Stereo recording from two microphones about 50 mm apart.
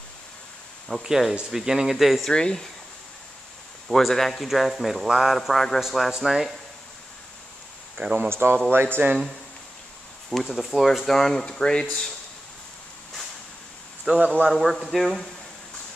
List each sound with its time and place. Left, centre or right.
0.8 s a man's voice: centre
2.3 s speech: centre
3.9 s a man's voice: centre
8.0 s speech: right
8.3 s speech: right
10.3 s a man's voice: centre
14.1 s speech: right
14.5 s a man's voice: centre